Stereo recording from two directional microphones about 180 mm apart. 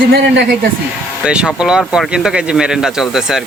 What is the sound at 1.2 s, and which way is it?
Speech, 5° right (ahead or behind).